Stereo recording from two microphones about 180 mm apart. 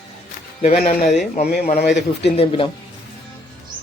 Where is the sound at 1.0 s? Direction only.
Centre (ahead or behind).